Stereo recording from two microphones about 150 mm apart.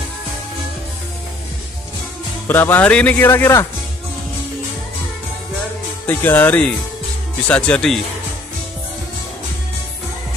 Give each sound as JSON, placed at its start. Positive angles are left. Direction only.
{"t": 2.4, "sound": "speech", "side_deg": 15}
{"t": 6.0, "sound": "speech", "side_deg": 15}